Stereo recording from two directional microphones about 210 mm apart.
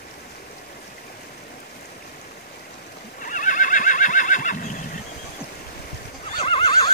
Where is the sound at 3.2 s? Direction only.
40° left (ahead or behind).